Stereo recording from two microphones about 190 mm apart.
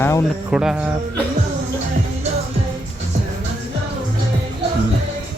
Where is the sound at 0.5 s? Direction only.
5° right (ahead or behind).